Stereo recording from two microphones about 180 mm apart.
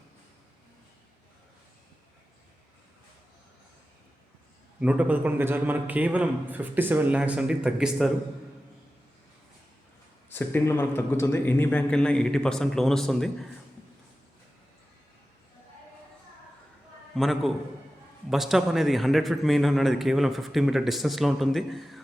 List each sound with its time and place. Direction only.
4.8 s a man's voice: 5° right (ahead or behind)
10.2 s a man's voice: 10° left (ahead or behind)
17.2 s a man's voice: centre (ahead or behind)